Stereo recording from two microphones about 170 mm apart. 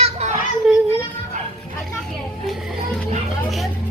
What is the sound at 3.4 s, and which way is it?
Vehicle, centre (ahead or behind).